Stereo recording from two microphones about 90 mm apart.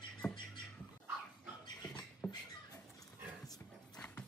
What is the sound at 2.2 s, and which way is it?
Rodents, 20° left (ahead or behind).